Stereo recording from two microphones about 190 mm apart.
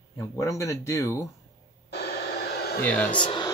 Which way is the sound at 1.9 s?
60° left (ahead or behind).